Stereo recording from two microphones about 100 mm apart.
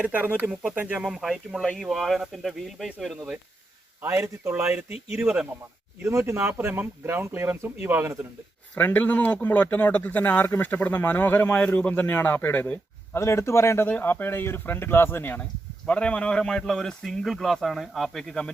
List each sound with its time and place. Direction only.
0.0 s speech: 15° right (ahead or behind)
1.0 s speech: centre (ahead or behind)
4.0 s speech: 25° right (ahead or behind)
4.9 s speech: 85° left
5.1 s speech: 15° right (ahead or behind)
6.0 s speech: 25° right (ahead or behind)
8.7 s a man's voice: 15° left (ahead or behind)
13.1 s speech: 30° left (ahead or behind); by 18.5 s 5° left (ahead or behind)